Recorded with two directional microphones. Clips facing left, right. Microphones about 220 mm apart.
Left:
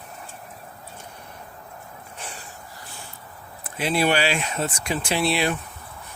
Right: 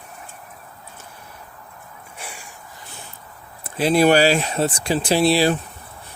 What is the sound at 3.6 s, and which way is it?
Speech, 35° right (ahead or behind).